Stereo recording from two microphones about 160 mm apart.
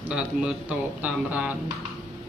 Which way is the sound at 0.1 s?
5° right (ahead or behind).